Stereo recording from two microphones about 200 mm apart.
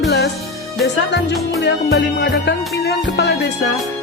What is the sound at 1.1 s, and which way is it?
Music, 60° left (ahead or behind).